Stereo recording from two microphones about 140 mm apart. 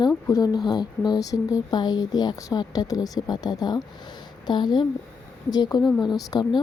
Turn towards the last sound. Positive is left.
turn(degrees=30)  # may be behind; listen again after turning